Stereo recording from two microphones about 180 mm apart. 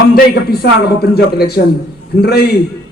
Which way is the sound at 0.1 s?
60° left (ahead or behind).